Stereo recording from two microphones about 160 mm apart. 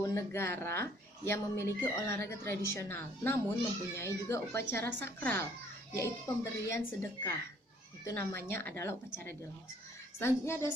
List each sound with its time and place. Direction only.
0.0 s speech: 20° left (ahead or behind)